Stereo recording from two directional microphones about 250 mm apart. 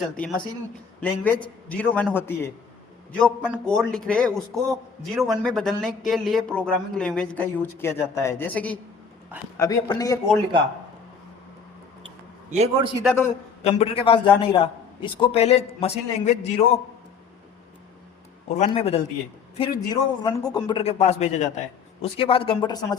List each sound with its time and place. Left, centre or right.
0.2 s a man's voice: centre
12.5 s a man's voice: right
13.1 s a woman's voice: centre
13.7 s a man's voice: left
18.4 s a man's voice: left